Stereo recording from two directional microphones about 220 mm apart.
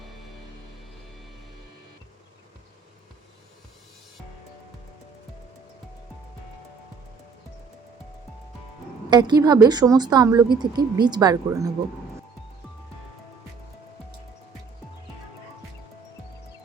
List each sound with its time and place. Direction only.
0.2 s music: centre (ahead or behind)
9.0 s speech: 20° right (ahead or behind)